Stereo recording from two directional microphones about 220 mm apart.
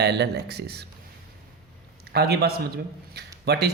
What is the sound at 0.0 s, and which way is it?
Speech, 50° right (ahead or behind).